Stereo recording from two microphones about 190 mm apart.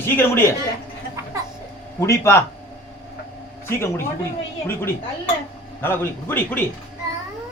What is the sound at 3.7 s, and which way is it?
Speech, 15° left (ahead or behind).